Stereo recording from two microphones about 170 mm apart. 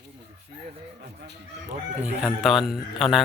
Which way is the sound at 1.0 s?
75° right (ahead or behind).